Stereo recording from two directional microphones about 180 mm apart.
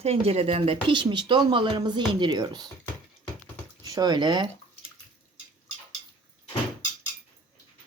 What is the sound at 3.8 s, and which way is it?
Speech, 20° right (ahead or behind).